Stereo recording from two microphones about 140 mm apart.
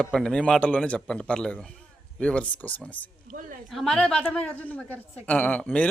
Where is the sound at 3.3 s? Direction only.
75° right (ahead or behind).